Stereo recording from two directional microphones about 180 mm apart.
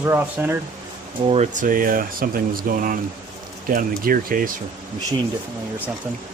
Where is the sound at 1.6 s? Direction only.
50° right (ahead or behind).